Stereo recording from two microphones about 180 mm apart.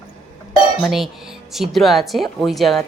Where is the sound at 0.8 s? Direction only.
Centre (ahead or behind).